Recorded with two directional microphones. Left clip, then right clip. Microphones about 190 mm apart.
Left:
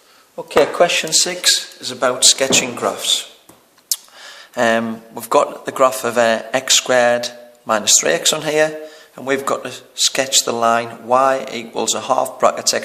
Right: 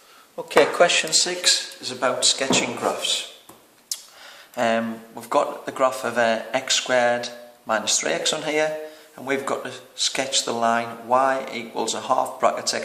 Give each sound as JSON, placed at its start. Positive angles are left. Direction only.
{"t": 0.3, "sound": "speech", "side_deg": 10}
{"t": 1.1, "sound": "speech", "side_deg": 40}